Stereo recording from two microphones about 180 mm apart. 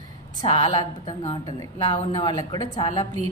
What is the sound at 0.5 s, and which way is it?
A woman's voice, 25° left (ahead or behind).